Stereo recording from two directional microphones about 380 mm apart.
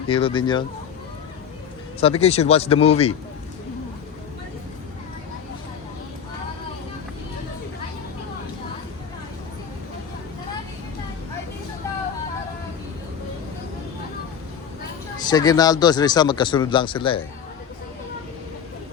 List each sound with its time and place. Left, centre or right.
0.1 s speech: centre
2.0 s speech: centre
15.2 s speech: centre